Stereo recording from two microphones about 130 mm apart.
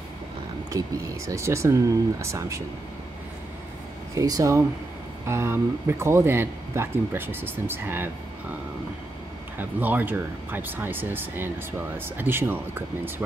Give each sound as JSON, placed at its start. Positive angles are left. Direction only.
{"t": 0.7, "sound": "speech", "side_deg": -25}
{"t": 4.1, "sound": "speech", "side_deg": -25}
{"t": 9.6, "sound": "speech", "side_deg": -15}